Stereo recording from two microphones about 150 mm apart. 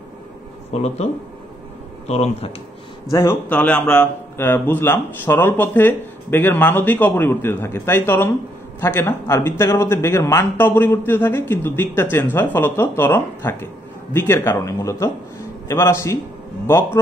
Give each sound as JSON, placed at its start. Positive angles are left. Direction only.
{"t": 0.7, "sound": "speech", "side_deg": 45}
{"t": 2.0, "sound": "speech", "side_deg": 45}
{"t": 3.1, "sound": "a man's voice", "side_deg": 20}
{"t": 3.4, "sound": "a man's voice", "side_deg": 10}